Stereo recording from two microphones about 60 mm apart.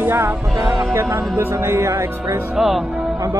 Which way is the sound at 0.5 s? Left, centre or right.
Right.